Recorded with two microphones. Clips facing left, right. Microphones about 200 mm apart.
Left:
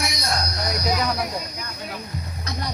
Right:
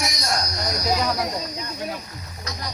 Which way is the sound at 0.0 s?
60° left (ahead or behind).